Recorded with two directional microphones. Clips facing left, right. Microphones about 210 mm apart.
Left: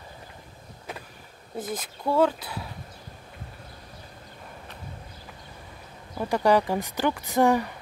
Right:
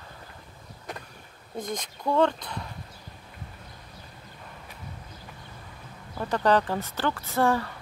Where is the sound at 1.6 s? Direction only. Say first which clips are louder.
Left 1 dB; 5° left (ahead or behind).